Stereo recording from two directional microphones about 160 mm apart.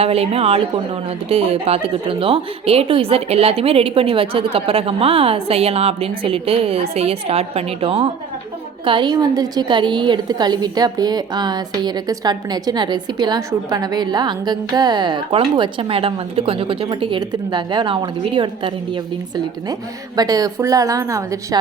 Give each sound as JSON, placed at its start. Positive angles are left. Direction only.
{"t": 0.0, "sound": "a woman's voice", "side_deg": -40}
{"t": 20.1, "sound": "a woman's voice", "side_deg": -25}